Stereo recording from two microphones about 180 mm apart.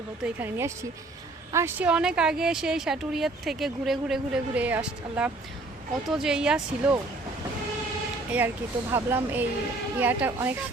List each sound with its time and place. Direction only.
0.3 s speech: 10° right (ahead or behind)
8.3 s speech: 10° right (ahead or behind)